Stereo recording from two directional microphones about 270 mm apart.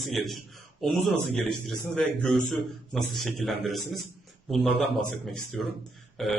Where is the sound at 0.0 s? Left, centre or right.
Centre.